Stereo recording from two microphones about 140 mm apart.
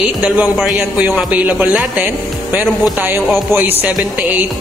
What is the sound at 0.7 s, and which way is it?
A woman's voice, 10° right (ahead or behind).